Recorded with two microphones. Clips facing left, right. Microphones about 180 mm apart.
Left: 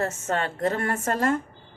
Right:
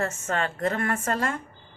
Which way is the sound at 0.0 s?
35° left (ahead or behind).